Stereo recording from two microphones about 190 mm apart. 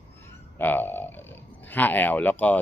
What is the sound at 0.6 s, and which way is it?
A man's voice, 10° left (ahead or behind).